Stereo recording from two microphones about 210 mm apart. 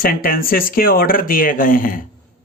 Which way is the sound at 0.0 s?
45° left (ahead or behind).